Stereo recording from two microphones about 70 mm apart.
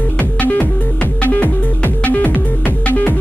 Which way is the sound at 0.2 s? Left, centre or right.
Left.